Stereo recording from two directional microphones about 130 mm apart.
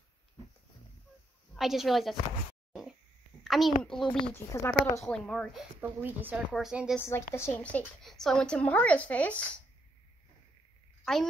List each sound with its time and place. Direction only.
1.5 s a woman's voice: centre (ahead or behind)
3.4 s a child's voice: centre (ahead or behind)
4.3 s a woman's voice: 15° left (ahead or behind)
5.0 s speech: 5° left (ahead or behind)
6.0 s a woman's voice: 15° right (ahead or behind)
7.1 s a woman's voice: 20° left (ahead or behind)
11.1 s speech: 5° left (ahead or behind)